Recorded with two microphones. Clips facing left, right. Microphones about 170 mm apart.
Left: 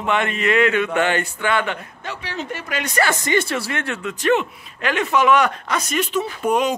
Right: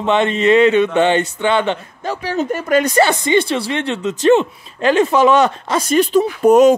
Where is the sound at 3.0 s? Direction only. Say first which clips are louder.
Right 6 dB; 25° right (ahead or behind); by 6.7 s 40° right (ahead or behind).